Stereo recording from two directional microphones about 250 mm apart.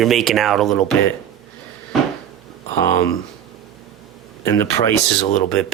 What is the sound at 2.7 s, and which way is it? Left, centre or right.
Speech, centre.